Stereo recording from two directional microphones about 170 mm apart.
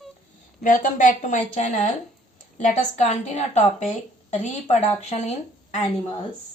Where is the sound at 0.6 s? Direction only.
50° left (ahead or behind).